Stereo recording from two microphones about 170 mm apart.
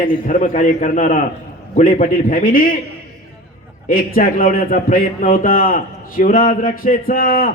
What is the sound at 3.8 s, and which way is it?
A man's voice, 55° left (ahead or behind).